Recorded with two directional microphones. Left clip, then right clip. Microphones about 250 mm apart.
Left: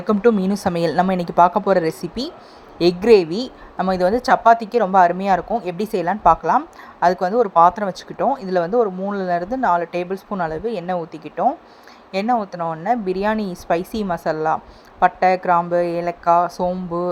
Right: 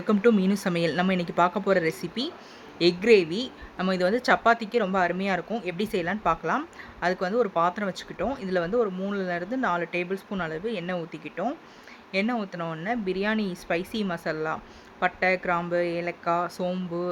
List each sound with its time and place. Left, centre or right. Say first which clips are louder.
0.1 s a woman's voice: left 6 dB; centre